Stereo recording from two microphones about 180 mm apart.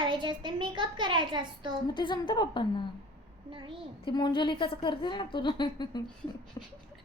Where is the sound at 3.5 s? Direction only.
30° right (ahead or behind).